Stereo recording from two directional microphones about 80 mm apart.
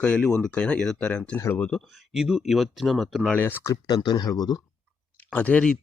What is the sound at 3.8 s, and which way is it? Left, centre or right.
Speech, left.